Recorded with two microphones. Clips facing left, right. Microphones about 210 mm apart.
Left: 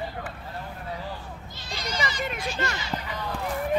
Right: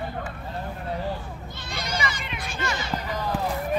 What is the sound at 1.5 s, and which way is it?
Goat, 55° right (ahead or behind).